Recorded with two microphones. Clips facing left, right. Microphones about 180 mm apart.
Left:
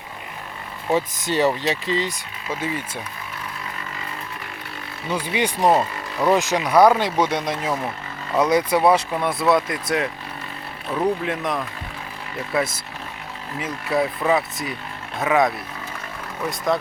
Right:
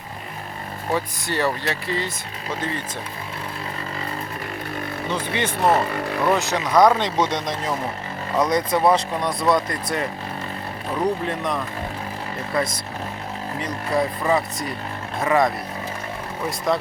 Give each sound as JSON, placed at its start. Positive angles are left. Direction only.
{"t": 0.9, "sound": "speech", "side_deg": 15}
{"t": 5.1, "sound": "speech", "side_deg": 10}
{"t": 5.9, "sound": "speech", "side_deg": -60}
{"t": 6.3, "sound": "speech", "side_deg": 15}